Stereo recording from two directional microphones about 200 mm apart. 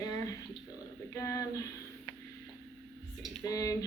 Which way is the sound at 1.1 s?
15° left (ahead or behind).